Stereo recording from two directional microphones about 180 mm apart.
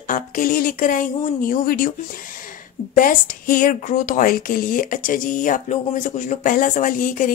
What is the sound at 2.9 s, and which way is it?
A woman's voice, 50° left (ahead or behind).